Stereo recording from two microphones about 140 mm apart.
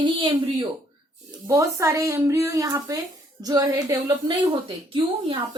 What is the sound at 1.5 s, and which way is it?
Speech, 20° right (ahead or behind).